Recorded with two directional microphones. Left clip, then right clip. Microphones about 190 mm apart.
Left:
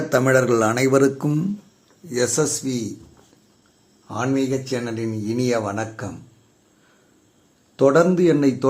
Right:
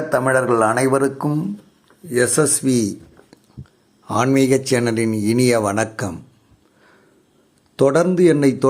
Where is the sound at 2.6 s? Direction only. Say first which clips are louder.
Right 8 dB; 30° right (ahead or behind).